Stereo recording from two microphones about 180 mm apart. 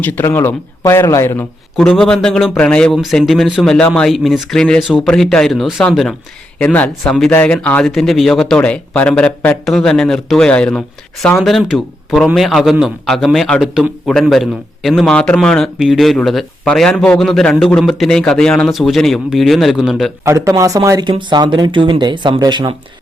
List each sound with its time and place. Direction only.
0.0 s speech: 10° left (ahead or behind)
1.7 s a man's voice: centre (ahead or behind)
20.2 s speech: 15° right (ahead or behind)